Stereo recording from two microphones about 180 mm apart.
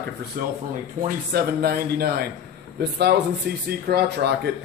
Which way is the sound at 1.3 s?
60° right (ahead or behind).